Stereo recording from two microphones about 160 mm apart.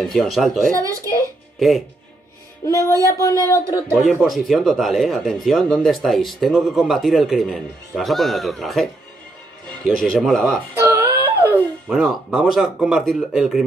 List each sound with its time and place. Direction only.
0.0 s speech: centre (ahead or behind)
2.6 s music: 20° left (ahead or behind)
3.4 s speech: 20° left (ahead or behind)
3.9 s speech: 5° right (ahead or behind)
9.8 s speech: centre (ahead or behind)
10.8 s a sound: 15° right (ahead or behind)
11.9 s speech: 5° right (ahead or behind)